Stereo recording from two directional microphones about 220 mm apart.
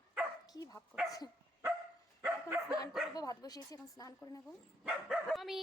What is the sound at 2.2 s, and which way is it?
Dog, 10° right (ahead or behind).